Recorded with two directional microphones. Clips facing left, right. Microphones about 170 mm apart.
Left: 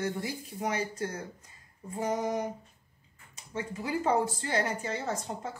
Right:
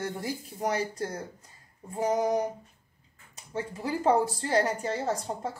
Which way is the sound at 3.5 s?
35° right (ahead or behind).